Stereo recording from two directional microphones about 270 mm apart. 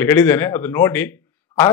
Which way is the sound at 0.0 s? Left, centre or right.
Centre.